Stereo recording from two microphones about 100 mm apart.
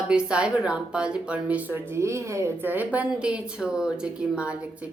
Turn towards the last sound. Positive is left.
turn(degrees=-10)  # may be behind; listen again after turning